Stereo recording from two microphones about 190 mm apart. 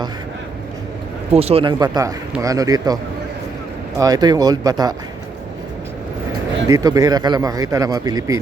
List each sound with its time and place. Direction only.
1.3 s a man's voice: 30° right (ahead or behind)
6.7 s a man's voice: 20° right (ahead or behind)